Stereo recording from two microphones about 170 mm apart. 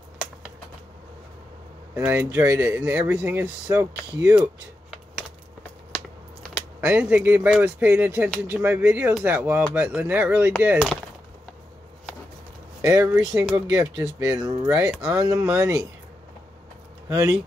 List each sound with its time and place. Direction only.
2.0 s speech: 10° right (ahead or behind)
4.2 s speech: 5° right (ahead or behind)
5.6 s a sound: 5° left (ahead or behind)
6.8 s speech: 10° right (ahead or behind)
12.8 s speech: 15° right (ahead or behind)
17.1 s speech: 20° right (ahead or behind)